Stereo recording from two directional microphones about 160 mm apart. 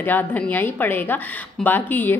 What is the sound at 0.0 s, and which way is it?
A woman's voice, 10° left (ahead or behind).